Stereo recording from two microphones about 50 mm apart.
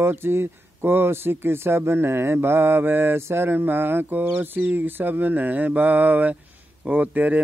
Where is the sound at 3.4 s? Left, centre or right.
Right.